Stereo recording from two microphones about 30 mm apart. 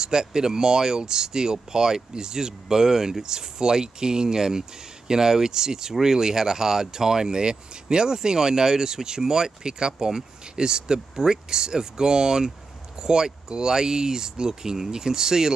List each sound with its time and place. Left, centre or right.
0.0 s speech: right